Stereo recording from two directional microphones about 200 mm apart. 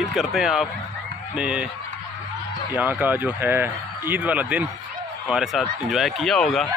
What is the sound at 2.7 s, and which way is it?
A man's voice, 5° right (ahead or behind).